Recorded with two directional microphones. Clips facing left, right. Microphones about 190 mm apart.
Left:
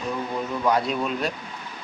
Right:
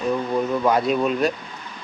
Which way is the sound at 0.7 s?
50° right (ahead or behind).